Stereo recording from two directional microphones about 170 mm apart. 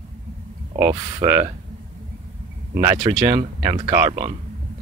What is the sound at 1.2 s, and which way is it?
Speech, 15° right (ahead or behind).